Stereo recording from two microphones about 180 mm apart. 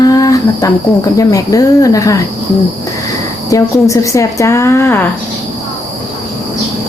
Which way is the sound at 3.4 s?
15° left (ahead or behind).